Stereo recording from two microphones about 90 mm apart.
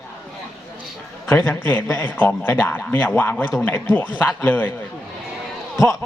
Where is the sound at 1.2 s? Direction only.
25° left (ahead or behind).